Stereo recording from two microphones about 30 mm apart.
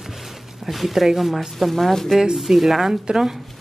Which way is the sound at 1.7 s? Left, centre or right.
Centre.